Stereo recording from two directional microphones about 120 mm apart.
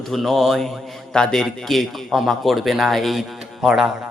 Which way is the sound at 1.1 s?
5° left (ahead or behind).